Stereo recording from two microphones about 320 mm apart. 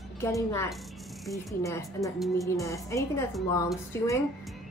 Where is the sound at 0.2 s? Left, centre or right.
Centre.